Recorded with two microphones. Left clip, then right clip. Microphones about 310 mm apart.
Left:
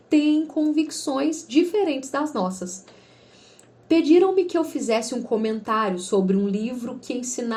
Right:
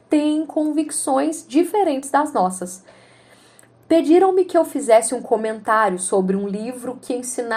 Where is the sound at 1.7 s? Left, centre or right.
Right.